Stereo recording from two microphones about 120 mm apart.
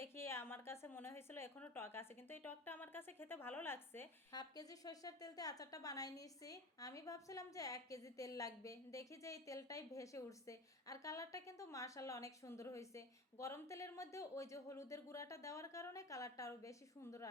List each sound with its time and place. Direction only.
0.0 s a woman's voice: 20° left (ahead or behind)
4.3 s a woman's voice: 35° left (ahead or behind)